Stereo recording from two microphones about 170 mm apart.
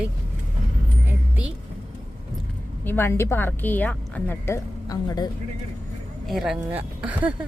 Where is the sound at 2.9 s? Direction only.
15° left (ahead or behind).